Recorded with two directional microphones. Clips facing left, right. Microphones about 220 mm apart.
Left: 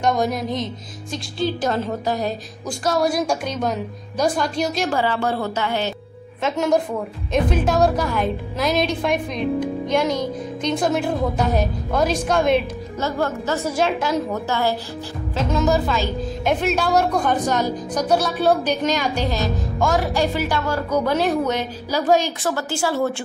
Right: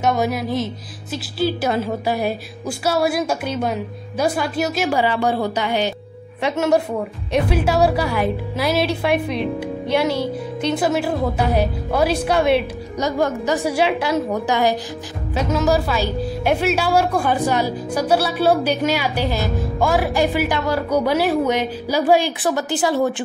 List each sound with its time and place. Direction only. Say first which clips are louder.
0.0 s music: right 1 dB; 5° right (ahead or behind)
1.1 s a woman's voice: right 2 dB; 5° right (ahead or behind)